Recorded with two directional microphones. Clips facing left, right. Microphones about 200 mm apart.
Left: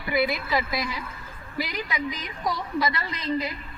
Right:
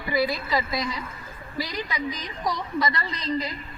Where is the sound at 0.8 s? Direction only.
5° left (ahead or behind).